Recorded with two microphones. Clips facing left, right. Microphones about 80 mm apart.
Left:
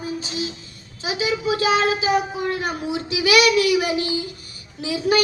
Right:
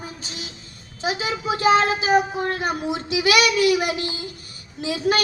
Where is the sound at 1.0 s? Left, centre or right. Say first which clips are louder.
Left 2 dB; right.